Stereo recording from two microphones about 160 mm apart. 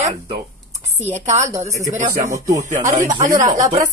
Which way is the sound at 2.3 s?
20° right (ahead or behind).